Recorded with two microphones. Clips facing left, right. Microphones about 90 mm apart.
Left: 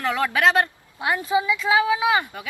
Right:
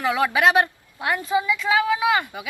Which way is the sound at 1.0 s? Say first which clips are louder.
Left 1 dB; 15° left (ahead or behind).